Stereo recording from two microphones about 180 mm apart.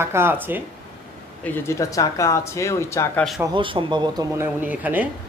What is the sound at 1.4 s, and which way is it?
Speech, 10° left (ahead or behind).